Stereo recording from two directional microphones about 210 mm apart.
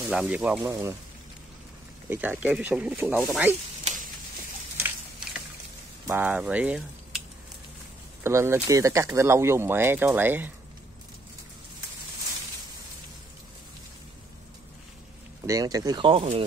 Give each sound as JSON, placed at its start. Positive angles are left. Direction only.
{"t": 0.1, "sound": "speech", "side_deg": -5}
{"t": 2.0, "sound": "speech", "side_deg": -10}
{"t": 3.8, "sound": "sizzle", "side_deg": -40}
{"t": 4.7, "sound": "a sound", "side_deg": -10}
{"t": 6.0, "sound": "speech", "side_deg": -10}
{"t": 8.2, "sound": "speech", "side_deg": -15}
{"t": 15.4, "sound": "speech", "side_deg": -15}